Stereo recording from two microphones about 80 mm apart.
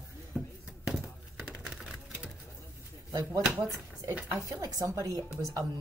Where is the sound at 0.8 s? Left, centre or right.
Centre.